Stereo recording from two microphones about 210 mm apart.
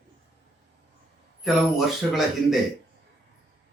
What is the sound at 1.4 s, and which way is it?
Speech, centre (ahead or behind).